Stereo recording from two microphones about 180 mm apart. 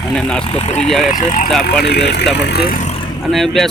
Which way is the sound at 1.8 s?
70° left (ahead or behind).